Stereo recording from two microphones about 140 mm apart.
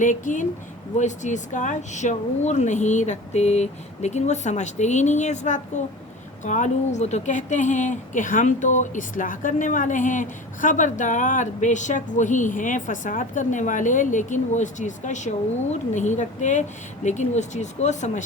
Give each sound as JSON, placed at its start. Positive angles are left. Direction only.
{"t": 0.0, "sound": "speech", "side_deg": 65}